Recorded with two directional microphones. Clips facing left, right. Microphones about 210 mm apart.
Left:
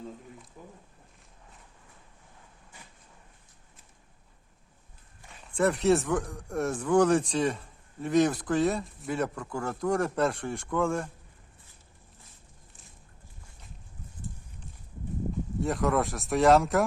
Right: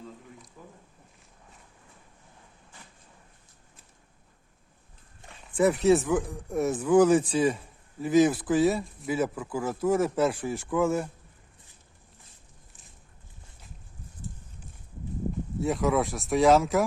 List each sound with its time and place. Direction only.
0.6 s a sound: 20° left (ahead or behind)
5.5 s speech: centre (ahead or behind)
15.6 s speech: centre (ahead or behind)